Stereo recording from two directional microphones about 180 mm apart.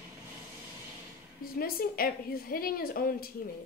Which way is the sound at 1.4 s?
55° left (ahead or behind).